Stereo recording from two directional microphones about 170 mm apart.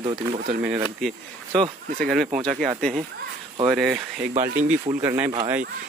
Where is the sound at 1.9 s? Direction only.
Centre (ahead or behind).